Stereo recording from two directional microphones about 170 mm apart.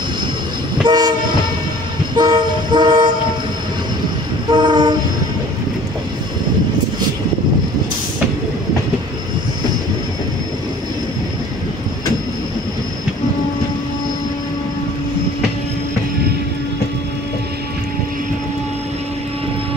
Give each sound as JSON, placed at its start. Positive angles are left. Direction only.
{"t": 0.8, "sound": "train", "side_deg": -25}
{"t": 2.1, "sound": "toot", "side_deg": -25}
{"t": 4.5, "sound": "train", "side_deg": -25}